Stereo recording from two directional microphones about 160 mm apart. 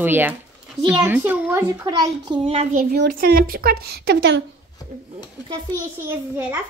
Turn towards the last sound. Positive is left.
turn(degrees=-15)  # may be behind; listen again after turning